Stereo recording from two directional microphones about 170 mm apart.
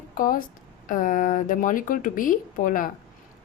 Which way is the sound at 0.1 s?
55° left (ahead or behind).